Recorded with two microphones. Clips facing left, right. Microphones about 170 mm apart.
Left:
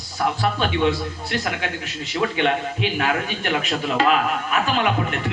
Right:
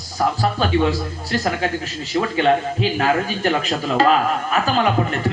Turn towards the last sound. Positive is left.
turn(degrees=-35)  # may be behind; listen again after turning